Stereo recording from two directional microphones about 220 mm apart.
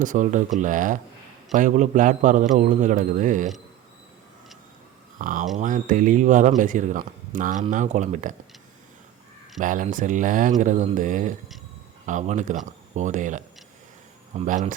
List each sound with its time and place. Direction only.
0.0 s a man's voice: 35° right (ahead or behind)
5.1 s a man's voice: 40° right (ahead or behind)
9.6 s a man's voice: 35° right (ahead or behind)